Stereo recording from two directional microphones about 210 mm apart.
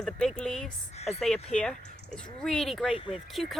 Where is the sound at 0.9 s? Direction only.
30° left (ahead or behind).